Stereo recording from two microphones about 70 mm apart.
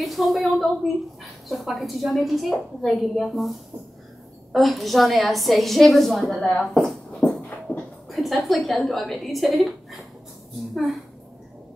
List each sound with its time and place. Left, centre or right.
0.0 s a woman's voice: centre
7.2 s a sound: left
8.1 s a woman's voice: centre